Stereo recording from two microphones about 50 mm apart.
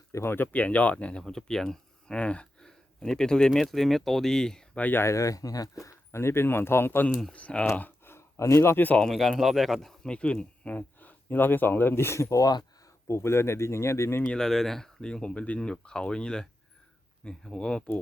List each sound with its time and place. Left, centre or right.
0.1 s speech: left
0.5 s speech: left
1.3 s speech: centre
2.1 s speech: left
5.0 s speech: left
7.3 s speech: left
8.4 s speech: left
8.6 s speech: left
9.0 s speech: centre
10.1 s speech: left
14.3 s speech: centre
15.1 s speech: centre